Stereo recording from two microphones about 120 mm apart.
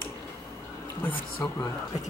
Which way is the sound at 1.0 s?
20° left (ahead or behind).